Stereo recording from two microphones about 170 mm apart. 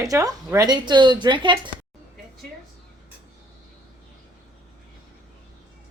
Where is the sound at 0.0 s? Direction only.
20° right (ahead or behind).